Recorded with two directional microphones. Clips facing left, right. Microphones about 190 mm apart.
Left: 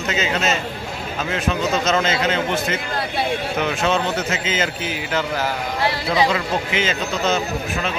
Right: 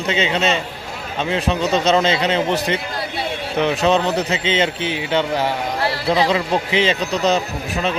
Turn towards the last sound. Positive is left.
turn(degrees=-35)  # may be behind; listen again after turning